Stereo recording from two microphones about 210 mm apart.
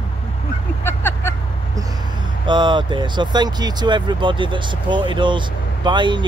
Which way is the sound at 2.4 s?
20° right (ahead or behind).